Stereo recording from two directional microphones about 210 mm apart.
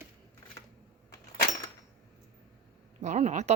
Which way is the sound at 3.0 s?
35° right (ahead or behind).